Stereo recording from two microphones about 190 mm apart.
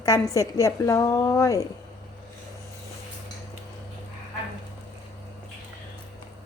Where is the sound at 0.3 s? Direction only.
15° left (ahead or behind).